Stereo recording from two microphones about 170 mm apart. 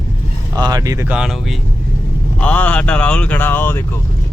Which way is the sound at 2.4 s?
10° left (ahead or behind).